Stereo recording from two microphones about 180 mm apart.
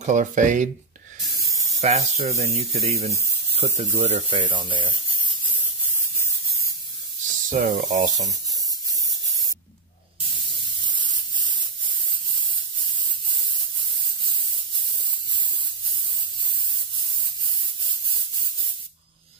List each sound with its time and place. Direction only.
0.0 s speech: 45° right (ahead or behind)
1.8 s speech: 35° right (ahead or behind)
7.5 s speech: 50° right (ahead or behind)